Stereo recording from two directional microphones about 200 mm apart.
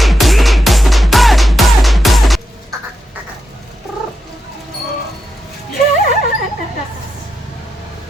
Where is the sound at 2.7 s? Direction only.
15° right (ahead or behind).